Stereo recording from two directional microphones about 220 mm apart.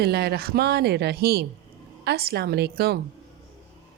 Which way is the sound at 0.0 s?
45° right (ahead or behind).